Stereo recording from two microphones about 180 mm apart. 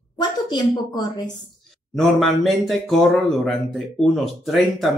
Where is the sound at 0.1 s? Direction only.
20° left (ahead or behind).